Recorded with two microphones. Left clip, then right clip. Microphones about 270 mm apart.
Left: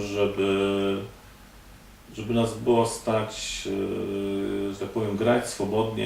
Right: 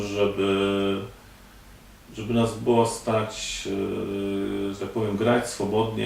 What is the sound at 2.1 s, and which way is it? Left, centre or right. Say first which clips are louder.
Speech: right 1 dB; centre.